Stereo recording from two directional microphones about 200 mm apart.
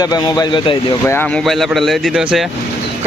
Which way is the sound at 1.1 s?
Centre (ahead or behind).